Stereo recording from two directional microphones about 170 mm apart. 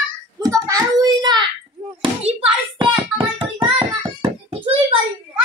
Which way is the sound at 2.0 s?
35° right (ahead or behind).